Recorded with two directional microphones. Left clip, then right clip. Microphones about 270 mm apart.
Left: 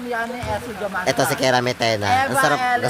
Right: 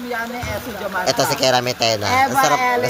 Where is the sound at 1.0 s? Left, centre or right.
Centre.